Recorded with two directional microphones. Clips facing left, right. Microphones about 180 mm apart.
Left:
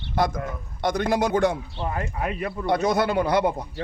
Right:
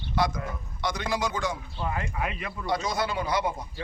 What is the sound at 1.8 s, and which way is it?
Speech, 40° left (ahead or behind).